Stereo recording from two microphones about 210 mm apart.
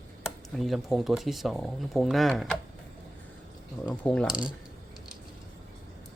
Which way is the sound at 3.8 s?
5° left (ahead or behind).